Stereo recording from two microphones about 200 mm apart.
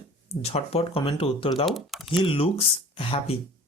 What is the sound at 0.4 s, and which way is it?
Speech, 30° left (ahead or behind).